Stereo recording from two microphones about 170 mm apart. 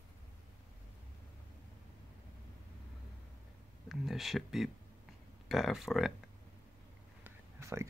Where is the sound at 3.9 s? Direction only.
Centre (ahead or behind).